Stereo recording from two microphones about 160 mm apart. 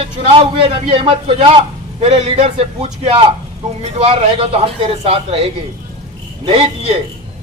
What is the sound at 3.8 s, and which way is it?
A man's voice, 40° right (ahead or behind).